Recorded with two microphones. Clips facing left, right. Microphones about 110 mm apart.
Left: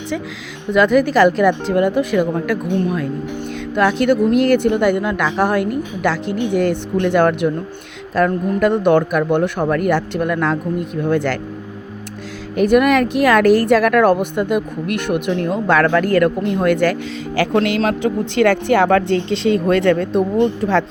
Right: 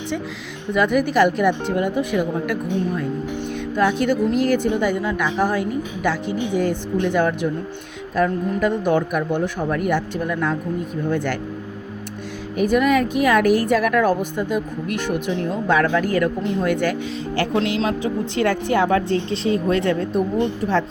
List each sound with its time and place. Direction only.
0.7 s speech: 90° left
3.8 s a woman's voice: 75° left (ahead or behind)
12.5 s a woman's voice: 70° left (ahead or behind)